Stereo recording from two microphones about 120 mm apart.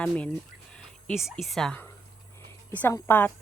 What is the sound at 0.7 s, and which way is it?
Speech, 5° left (ahead or behind).